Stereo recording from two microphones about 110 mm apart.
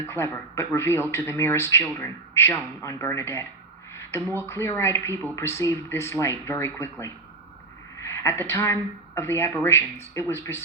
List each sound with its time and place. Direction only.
0.1 s speech: 25° left (ahead or behind)
7.9 s a woman's voice: 25° left (ahead or behind)